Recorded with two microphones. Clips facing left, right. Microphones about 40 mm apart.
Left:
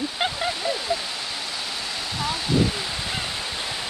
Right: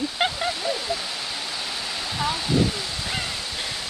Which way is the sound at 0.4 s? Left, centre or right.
Centre.